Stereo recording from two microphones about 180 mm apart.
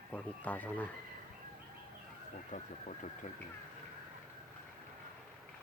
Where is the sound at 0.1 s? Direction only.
10° left (ahead or behind).